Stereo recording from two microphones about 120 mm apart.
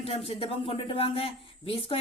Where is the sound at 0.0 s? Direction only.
55° left (ahead or behind).